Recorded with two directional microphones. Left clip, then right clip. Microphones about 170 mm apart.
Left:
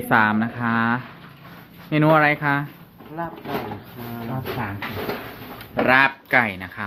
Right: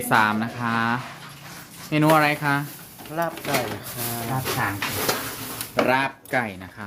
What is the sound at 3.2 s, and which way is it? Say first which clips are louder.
Speech: right 4 dB; 90° right.